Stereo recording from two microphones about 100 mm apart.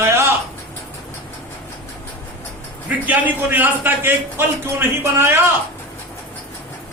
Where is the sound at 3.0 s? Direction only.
15° right (ahead or behind).